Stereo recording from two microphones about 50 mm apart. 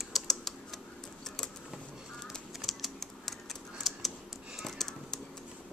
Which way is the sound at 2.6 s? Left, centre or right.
Centre.